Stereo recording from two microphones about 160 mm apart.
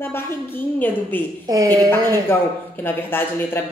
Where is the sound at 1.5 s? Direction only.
20° right (ahead or behind).